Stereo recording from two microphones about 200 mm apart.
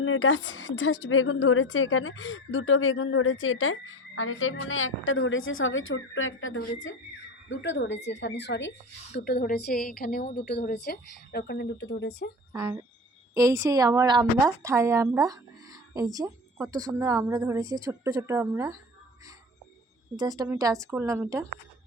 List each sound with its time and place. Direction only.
0.0 s a woman's voice: 80° left
7.4 s a woman's voice: 65° left (ahead or behind)
9.1 s a woman's voice: 50° left (ahead or behind)
12.5 s a woman's voice: 15° right (ahead or behind)
20.1 s a woman's voice: 20° right (ahead or behind)